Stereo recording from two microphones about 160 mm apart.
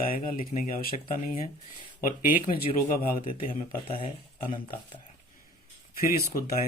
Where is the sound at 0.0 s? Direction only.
60° left (ahead or behind).